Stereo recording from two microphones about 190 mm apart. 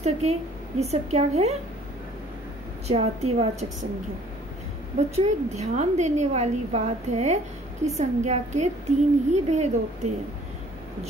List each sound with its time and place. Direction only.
0.0 s a woman's voice: 35° right (ahead or behind)
2.9 s a woman's voice: 35° right (ahead or behind)
4.9 s a woman's voice: 35° right (ahead or behind)